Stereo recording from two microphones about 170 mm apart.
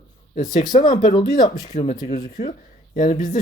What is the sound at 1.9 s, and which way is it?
Speech, 45° left (ahead or behind).